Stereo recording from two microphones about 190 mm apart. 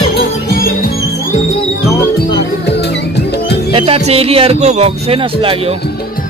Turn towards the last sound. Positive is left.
turn(degrees=-35)  # may be behind; listen again after turning